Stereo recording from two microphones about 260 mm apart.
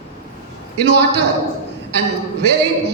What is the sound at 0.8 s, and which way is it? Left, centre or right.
Speech, right.